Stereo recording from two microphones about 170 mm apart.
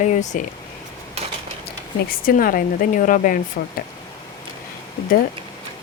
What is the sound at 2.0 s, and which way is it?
Speech, 55° left (ahead or behind).